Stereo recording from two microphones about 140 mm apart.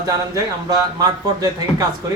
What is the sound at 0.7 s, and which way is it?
Speech, 25° right (ahead or behind).